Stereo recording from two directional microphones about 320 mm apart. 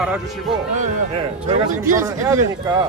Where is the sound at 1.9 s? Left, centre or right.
Centre.